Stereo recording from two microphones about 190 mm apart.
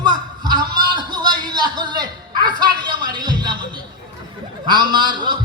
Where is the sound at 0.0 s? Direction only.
25° right (ahead or behind).